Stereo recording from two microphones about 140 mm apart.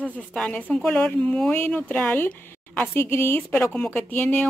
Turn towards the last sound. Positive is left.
turn(degrees=15)  # may be behind; listen again after turning